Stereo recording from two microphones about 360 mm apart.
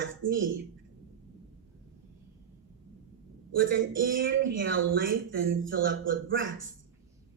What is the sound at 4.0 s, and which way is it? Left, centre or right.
Speech, right.